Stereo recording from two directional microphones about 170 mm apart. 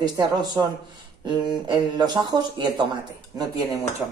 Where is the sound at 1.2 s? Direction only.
25° right (ahead or behind).